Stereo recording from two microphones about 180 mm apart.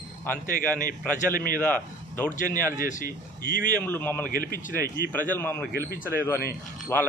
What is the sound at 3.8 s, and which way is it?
Speech, 10° left (ahead or behind).